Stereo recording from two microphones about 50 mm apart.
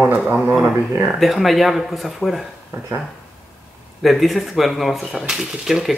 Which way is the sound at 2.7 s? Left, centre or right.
Right.